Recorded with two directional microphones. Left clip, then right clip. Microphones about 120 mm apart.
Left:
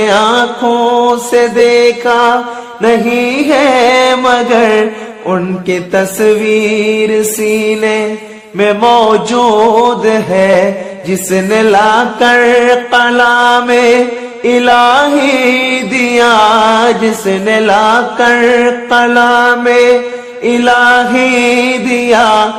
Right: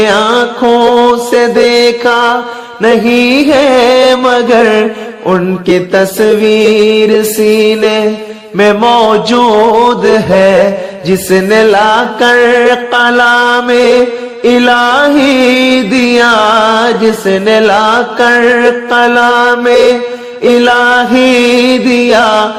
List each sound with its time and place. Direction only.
0.0 s music: 45° right (ahead or behind)
8.5 s music: 45° right (ahead or behind)
11.3 s music: 40° right (ahead or behind)